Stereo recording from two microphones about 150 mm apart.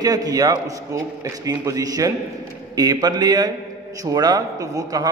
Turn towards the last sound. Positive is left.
turn(degrees=-25)  # may be behind; listen again after turning